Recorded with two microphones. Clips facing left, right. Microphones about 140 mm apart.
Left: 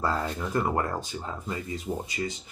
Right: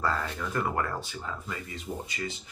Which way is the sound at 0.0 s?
25° left (ahead or behind).